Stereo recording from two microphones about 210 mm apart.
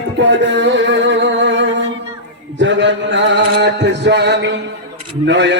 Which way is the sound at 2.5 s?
60° right (ahead or behind).